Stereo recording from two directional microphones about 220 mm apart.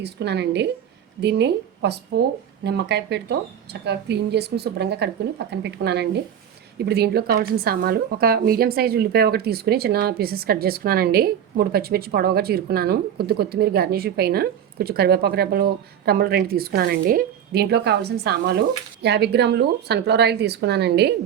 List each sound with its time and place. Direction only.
0.0 s a woman's voice: 50° right (ahead or behind)